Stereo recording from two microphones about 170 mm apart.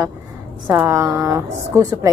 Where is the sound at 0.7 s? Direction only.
15° right (ahead or behind).